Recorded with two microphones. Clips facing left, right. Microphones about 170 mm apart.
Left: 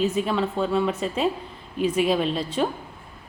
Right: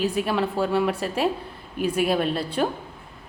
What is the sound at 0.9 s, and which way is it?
Speech, 65° right (ahead or behind).